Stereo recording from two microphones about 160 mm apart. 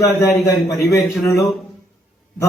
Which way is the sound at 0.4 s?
20° left (ahead or behind).